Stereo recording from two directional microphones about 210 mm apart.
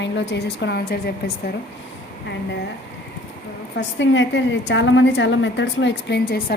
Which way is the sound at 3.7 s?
60° left (ahead or behind).